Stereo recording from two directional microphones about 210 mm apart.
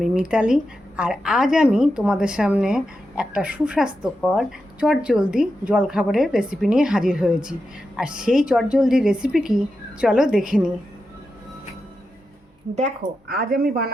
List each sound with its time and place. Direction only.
0.0 s a woman's voice: 5° right (ahead or behind)
13.2 s speech: 45° right (ahead or behind)